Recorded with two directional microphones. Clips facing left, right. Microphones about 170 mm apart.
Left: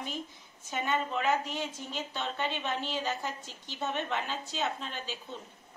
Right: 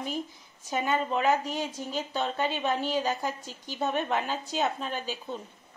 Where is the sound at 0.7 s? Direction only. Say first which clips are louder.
Right 4 dB; 40° right (ahead or behind).